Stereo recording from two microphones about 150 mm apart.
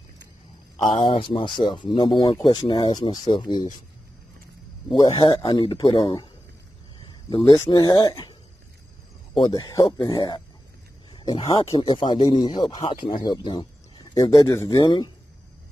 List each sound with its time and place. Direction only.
0.8 s speech: 35° left (ahead or behind)
5.1 s speech: 30° left (ahead or behind)
7.2 s speech: 30° left (ahead or behind)
9.5 s speech: 25° left (ahead or behind)